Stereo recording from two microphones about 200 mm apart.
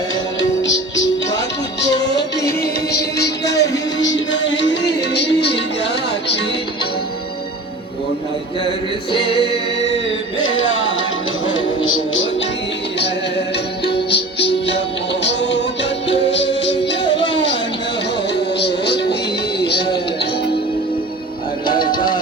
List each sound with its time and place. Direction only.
0.3 s music: 65° left (ahead or behind)
2.5 s music: 50° left (ahead or behind)
10.4 s music: 80° left
13.8 s music: 55° left (ahead or behind)
17.3 s a sound: 65° left (ahead or behind)
18.6 s music: 55° left (ahead or behind)
21.9 s music: 25° left (ahead or behind)